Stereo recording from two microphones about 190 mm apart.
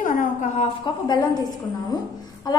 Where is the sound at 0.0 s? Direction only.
40° left (ahead or behind).